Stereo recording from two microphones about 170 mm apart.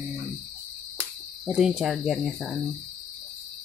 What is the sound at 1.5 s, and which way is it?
Speech, 5° right (ahead or behind).